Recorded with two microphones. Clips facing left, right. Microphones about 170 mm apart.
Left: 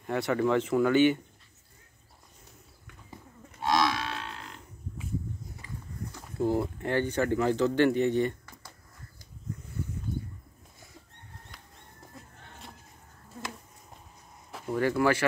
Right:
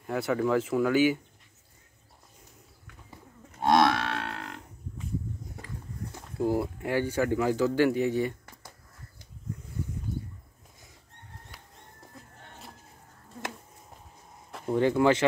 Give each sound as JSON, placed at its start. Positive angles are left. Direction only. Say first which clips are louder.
{"t": 0.0, "sound": "speech", "louder": "even", "side_deg": 0}
{"t": 3.6, "sound": "grunt", "louder": "right 4 dB", "side_deg": -55}
{"t": 6.3, "sound": "speech", "louder": "even", "side_deg": -10}
{"t": 11.5, "sound": "bird", "louder": "right 1 dB", "side_deg": -5}
{"t": 14.7, "sound": "speech", "louder": "right 3 dB", "side_deg": -20}